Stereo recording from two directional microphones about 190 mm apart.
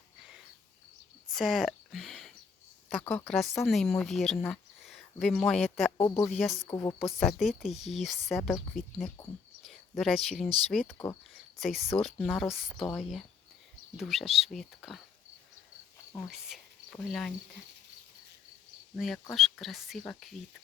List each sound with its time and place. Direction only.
1.3 s a sound: centre (ahead or behind)
3.0 s speech: 10° left (ahead or behind)
6.0 s speech: 20° left (ahead or behind)
6.2 s speech: centre (ahead or behind)
6.7 s speech: 15° left (ahead or behind)
7.0 s speech: centre (ahead or behind)
9.6 s speech: centre (ahead or behind)
10.9 s speech: 15° left (ahead or behind)
11.5 s speech: centre (ahead or behind)
16.1 s speech: centre (ahead or behind)
18.9 s speech: centre (ahead or behind)